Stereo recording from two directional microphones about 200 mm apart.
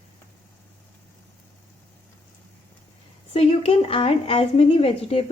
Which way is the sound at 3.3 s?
30° left (ahead or behind).